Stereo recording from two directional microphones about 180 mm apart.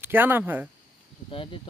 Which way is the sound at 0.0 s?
10° right (ahead or behind).